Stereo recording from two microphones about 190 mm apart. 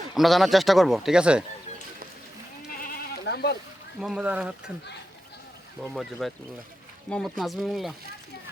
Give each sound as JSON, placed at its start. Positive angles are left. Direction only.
{"t": 0.1, "sound": "a man's voice", "side_deg": 0}
{"t": 2.8, "sound": "sheep", "side_deg": 55}
{"t": 4.0, "sound": "a man's voice", "side_deg": -5}
{"t": 5.8, "sound": "a man's voice", "side_deg": 0}